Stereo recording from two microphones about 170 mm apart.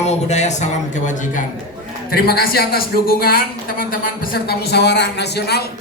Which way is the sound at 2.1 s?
65° left (ahead or behind).